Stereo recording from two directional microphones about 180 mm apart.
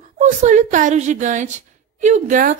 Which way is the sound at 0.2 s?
40° right (ahead or behind).